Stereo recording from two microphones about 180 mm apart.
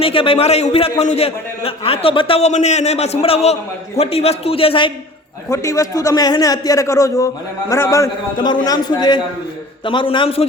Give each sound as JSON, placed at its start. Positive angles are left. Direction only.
{"t": 0.0, "sound": "a man's voice", "side_deg": 30}
{"t": 5.5, "sound": "a man's voice", "side_deg": 20}